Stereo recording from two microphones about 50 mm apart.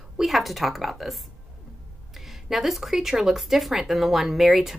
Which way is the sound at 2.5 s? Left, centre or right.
Centre.